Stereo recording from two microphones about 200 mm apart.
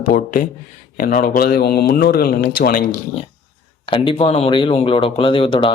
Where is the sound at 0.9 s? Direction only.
45° left (ahead or behind).